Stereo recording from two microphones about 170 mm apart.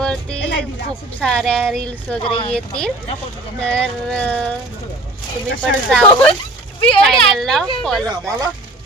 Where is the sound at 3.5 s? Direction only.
5° left (ahead or behind).